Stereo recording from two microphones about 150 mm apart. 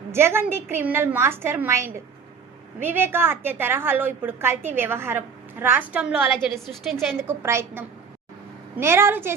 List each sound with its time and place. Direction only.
0.1 s a woman's voice: 15° right (ahead or behind)
7.2 s a woman's voice: 15° right (ahead or behind)